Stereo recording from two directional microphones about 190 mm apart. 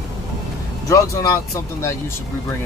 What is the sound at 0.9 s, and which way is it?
Speech, 15° left (ahead or behind).